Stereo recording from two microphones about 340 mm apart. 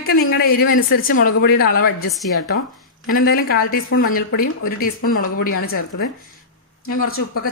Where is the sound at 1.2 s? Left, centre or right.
Left.